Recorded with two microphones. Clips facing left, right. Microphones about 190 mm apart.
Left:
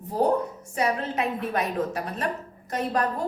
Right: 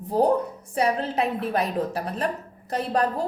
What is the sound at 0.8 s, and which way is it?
A woman's voice, 35° right (ahead or behind).